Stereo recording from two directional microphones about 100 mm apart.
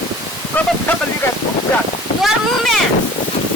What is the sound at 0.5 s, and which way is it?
Speech, 15° left (ahead or behind).